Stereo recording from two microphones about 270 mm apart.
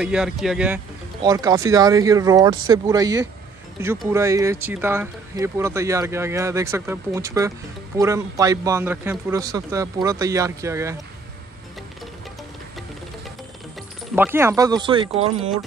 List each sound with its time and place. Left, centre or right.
0.0 s speech: centre
1.2 s speech: centre
14.1 s speech: centre